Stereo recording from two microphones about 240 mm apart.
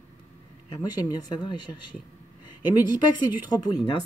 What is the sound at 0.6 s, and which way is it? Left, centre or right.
A woman's voice, centre.